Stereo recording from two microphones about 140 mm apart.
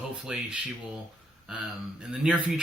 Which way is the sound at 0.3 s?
5° right (ahead or behind).